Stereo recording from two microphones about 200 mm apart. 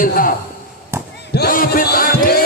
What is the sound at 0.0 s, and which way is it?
Speech, 45° left (ahead or behind).